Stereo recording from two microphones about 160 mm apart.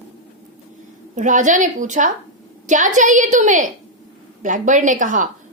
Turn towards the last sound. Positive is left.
turn(degrees=-55)  # may be behind; listen again after turning